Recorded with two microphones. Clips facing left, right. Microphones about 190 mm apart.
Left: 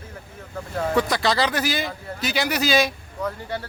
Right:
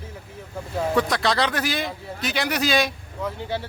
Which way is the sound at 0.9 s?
Centre (ahead or behind).